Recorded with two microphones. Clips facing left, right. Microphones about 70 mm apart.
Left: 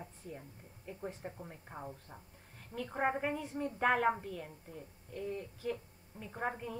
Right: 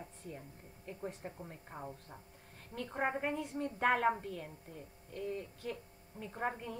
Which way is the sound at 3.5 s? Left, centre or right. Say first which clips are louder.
Left 1 dB; centre.